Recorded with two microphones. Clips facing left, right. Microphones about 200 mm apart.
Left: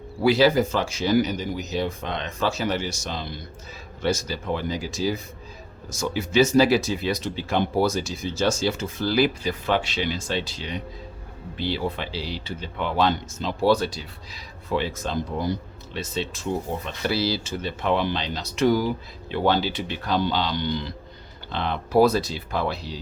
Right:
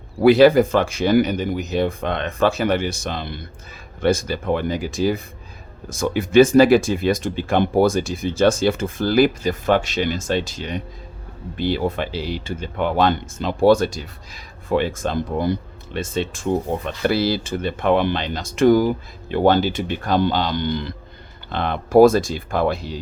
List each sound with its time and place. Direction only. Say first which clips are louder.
0.2 s speech: right 7 dB; 55° right (ahead or behind)